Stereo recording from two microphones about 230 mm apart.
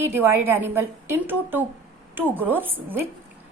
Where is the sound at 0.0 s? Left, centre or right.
Centre.